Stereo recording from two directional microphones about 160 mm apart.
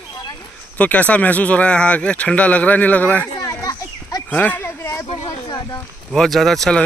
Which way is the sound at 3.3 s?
20° left (ahead or behind).